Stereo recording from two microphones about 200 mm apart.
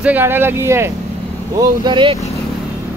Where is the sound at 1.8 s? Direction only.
25° right (ahead or behind).